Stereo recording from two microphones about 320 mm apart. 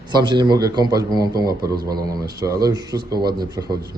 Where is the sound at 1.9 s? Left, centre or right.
Right.